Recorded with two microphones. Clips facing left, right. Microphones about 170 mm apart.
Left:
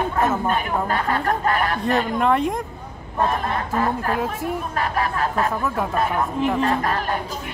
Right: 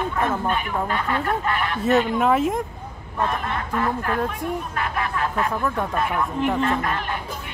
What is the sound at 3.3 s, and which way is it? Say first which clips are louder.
Speech: left 3 dB; 35° left (ahead or behind).